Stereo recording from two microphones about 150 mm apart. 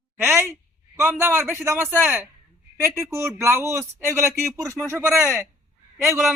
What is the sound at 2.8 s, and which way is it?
Speech, 20° right (ahead or behind).